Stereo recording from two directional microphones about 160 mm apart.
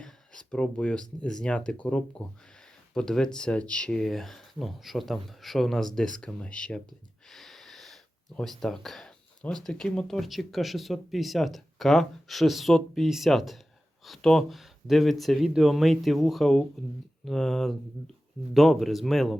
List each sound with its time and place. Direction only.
0.0 s speech: 5° left (ahead or behind)